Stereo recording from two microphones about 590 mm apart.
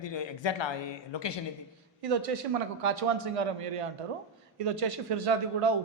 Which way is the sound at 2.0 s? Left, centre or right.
Right.